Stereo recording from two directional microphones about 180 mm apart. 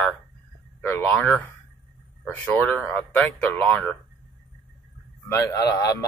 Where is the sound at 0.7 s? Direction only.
10° left (ahead or behind).